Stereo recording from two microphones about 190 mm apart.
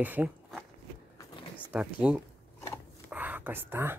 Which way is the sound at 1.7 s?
5° right (ahead or behind).